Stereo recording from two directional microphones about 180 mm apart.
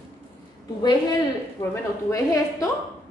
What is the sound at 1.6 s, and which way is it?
A woman's voice, 20° left (ahead or behind).